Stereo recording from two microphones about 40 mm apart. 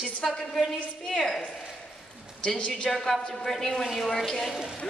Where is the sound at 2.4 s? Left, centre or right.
Left.